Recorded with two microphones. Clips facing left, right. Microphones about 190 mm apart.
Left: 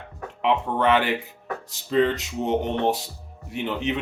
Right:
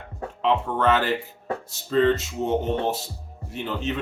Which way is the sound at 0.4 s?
15° left (ahead or behind).